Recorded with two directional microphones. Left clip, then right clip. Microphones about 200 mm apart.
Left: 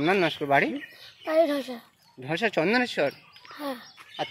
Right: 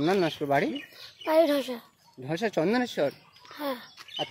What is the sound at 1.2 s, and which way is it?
Speech, 35° right (ahead or behind).